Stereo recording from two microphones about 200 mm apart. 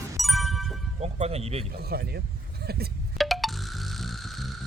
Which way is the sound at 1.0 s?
30° right (ahead or behind).